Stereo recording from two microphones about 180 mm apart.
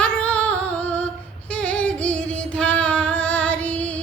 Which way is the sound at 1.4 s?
5° left (ahead or behind).